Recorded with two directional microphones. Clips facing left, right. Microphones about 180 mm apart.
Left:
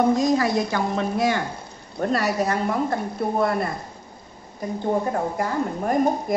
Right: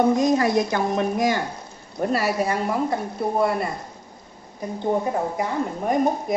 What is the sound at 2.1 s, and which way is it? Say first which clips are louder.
A woman's voice: even; 5° right (ahead or behind).